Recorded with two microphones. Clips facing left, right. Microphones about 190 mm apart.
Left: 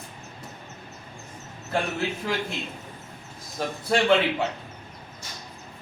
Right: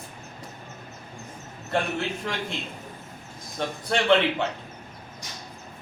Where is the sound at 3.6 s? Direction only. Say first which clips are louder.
Left 2 dB; 5° left (ahead or behind).